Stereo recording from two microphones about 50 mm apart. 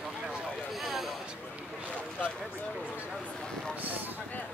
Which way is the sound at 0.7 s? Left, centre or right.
Centre.